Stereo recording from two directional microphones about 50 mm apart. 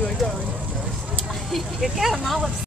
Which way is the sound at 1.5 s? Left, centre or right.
Centre.